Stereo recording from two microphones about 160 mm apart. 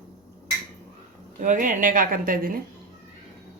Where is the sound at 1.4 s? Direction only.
55° right (ahead or behind).